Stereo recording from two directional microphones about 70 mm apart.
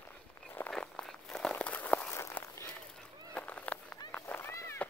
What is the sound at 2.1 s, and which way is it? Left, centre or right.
Walk, left.